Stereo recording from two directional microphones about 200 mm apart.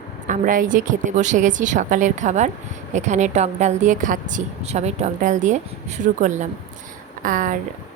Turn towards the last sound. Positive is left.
turn(degrees=-40)  # may be behind; listen again after turning